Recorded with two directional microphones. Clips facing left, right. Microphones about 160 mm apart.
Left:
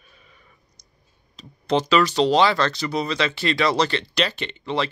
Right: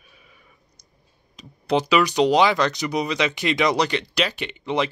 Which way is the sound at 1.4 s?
10° right (ahead or behind).